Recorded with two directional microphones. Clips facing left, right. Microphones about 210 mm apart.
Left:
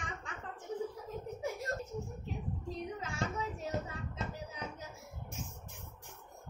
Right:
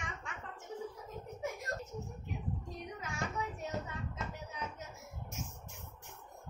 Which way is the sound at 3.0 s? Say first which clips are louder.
Right 1 dB; 30° left (ahead or behind).